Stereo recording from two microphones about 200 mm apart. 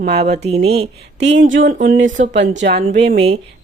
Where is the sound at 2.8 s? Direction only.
30° right (ahead or behind).